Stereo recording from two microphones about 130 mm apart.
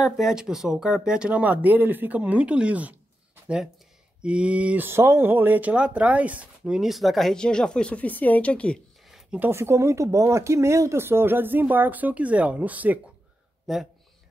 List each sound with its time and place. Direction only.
0.0 s speech: 5° right (ahead or behind)
4.2 s speech: 10° right (ahead or behind); by 8.7 s 10° left (ahead or behind)
9.1 s a sound: 10° right (ahead or behind)
9.5 s speech: 20° right (ahead or behind)
13.7 s speech: centre (ahead or behind)